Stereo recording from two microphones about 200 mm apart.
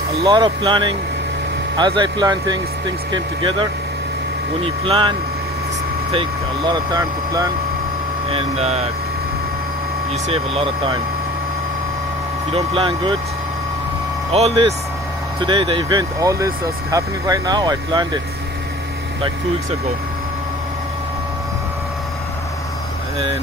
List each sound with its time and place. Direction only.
0.2 s speech: 20° right (ahead or behind)
6.1 s speech: 20° right (ahead or behind)
8.3 s speech: 30° right (ahead or behind)
10.2 s speech: 30° right (ahead or behind)
12.5 s speech: 25° right (ahead or behind)
14.3 s speech: 30° right (ahead or behind)